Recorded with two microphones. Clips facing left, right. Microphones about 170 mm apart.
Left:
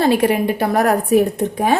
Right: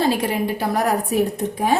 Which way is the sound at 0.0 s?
60° left (ahead or behind).